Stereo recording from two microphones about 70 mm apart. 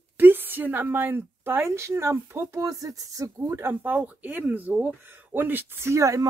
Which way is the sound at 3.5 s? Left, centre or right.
Right.